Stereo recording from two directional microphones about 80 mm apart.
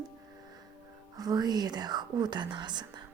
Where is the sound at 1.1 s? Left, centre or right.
Right.